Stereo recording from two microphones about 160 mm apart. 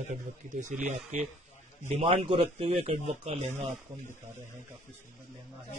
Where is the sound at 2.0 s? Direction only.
40° right (ahead or behind).